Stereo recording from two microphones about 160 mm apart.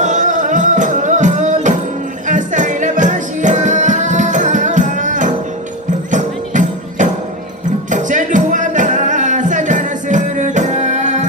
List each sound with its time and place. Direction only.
0.0 s music: 50° right (ahead or behind)